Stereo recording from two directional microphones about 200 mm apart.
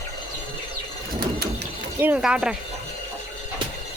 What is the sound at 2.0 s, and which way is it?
Speech, 10° right (ahead or behind).